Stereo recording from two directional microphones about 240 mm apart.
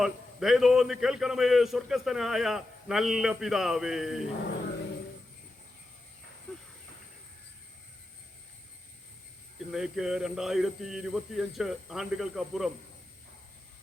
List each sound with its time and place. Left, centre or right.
0.0 s a man's voice: centre
9.7 s a man's voice: centre